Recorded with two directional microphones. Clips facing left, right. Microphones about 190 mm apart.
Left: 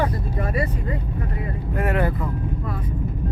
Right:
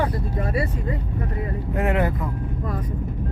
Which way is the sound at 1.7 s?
20° right (ahead or behind).